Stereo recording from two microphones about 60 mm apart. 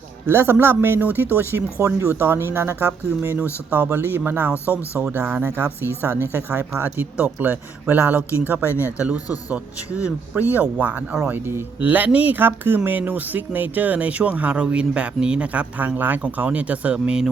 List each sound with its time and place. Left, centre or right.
0.3 s speech: right
1.8 s speech: right
2.1 s speech: right
6.7 s speech: right
9.0 s speech: right
16.0 s speech: right